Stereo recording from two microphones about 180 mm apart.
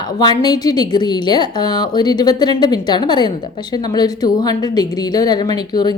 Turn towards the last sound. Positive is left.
turn(degrees=20)  # may be behind; listen again after turning